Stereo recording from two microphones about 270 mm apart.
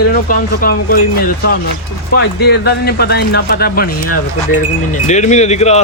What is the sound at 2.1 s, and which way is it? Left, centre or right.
Speech, left.